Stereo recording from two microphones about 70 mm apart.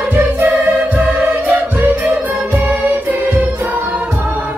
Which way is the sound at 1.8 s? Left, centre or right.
Centre.